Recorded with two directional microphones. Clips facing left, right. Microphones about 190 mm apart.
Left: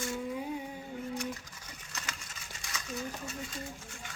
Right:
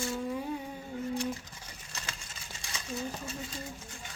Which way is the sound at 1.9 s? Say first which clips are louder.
Even; 30° right (ahead or behind).